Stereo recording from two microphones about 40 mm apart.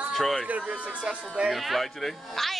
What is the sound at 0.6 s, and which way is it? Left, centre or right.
Speech, right.